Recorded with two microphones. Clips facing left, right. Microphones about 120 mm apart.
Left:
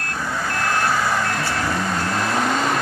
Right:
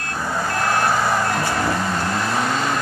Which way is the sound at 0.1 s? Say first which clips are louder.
Right 2 dB; 20° right (ahead or behind).